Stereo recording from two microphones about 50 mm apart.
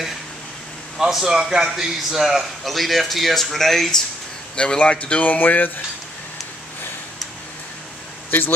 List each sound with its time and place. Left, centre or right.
0.9 s a man's voice: centre
4.6 s speech: left
8.3 s speech: left